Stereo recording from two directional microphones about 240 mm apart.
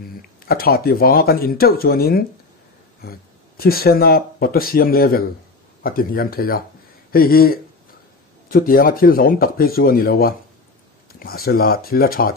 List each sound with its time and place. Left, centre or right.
0.5 s speech: left